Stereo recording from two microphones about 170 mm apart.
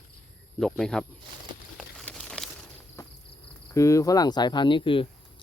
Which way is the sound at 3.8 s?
20° left (ahead or behind).